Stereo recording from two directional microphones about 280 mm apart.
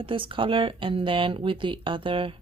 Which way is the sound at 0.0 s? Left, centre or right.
Centre.